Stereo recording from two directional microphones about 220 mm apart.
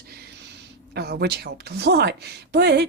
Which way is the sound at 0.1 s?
50° right (ahead or behind).